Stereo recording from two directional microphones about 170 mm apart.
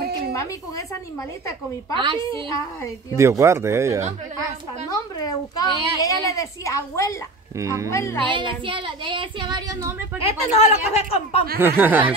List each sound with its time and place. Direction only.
0.3 s a woman's voice: 20° left (ahead or behind)
2.0 s speech: 30° right (ahead or behind)
3.2 s speech: 15° right (ahead or behind)
5.2 s a child's voice: 20° left (ahead or behind)
7.5 s speech: 20° right (ahead or behind)
7.9 s speech: 15° left (ahead or behind)
8.3 s speech: 30° right (ahead or behind)
10.2 s speech: 35° left (ahead or behind)
11.6 s speech: 10° right (ahead or behind)